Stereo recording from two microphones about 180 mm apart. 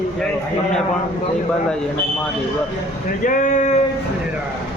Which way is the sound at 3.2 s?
45° left (ahead or behind).